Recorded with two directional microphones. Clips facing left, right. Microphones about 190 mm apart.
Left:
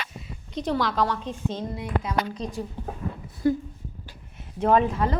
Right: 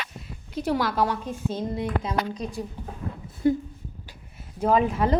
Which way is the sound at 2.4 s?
10° right (ahead or behind).